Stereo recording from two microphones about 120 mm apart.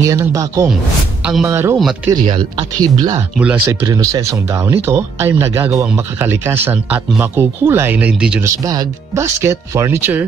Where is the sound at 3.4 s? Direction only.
10° right (ahead or behind).